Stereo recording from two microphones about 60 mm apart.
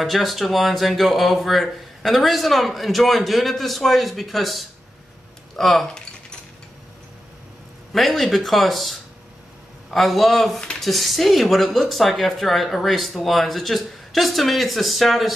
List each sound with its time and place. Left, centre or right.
0.0 s speech: centre
7.9 s speech: centre